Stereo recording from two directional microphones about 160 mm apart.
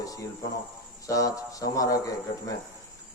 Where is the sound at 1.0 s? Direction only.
20° left (ahead or behind).